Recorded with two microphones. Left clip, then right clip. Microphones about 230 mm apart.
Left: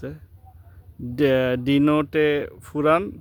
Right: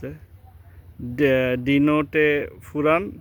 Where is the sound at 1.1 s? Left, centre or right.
Centre.